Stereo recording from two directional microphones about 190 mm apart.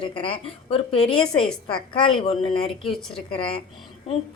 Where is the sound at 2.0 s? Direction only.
30° left (ahead or behind).